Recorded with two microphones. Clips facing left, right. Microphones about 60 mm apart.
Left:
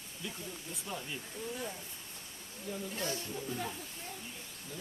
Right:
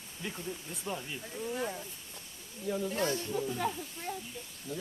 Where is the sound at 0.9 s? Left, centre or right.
Right.